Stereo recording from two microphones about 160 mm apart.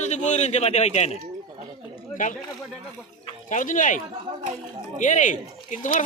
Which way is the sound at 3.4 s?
55° left (ahead or behind).